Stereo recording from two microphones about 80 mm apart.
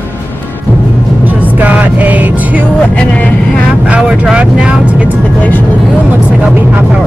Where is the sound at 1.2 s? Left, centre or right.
Centre.